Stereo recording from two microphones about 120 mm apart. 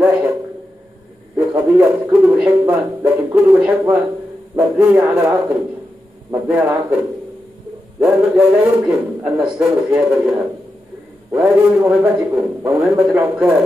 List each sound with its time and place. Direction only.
1.3 s a sound: 20° right (ahead or behind)
2.3 s a man's voice: 15° right (ahead or behind)
8.0 s a man's voice: 10° right (ahead or behind)
11.4 s a man's voice: 10° right (ahead or behind)